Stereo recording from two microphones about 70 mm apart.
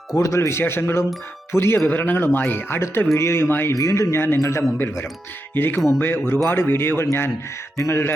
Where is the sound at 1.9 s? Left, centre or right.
Left.